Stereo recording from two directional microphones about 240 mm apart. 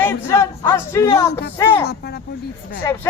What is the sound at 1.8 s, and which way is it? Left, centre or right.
Speech, left.